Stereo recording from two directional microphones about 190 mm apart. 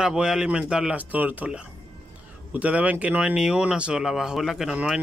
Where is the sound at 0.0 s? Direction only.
5° right (ahead or behind).